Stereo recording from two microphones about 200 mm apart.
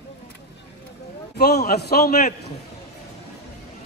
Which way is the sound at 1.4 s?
55° left (ahead or behind).